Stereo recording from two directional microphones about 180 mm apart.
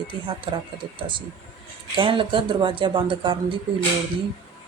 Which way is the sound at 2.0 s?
30° right (ahead or behind).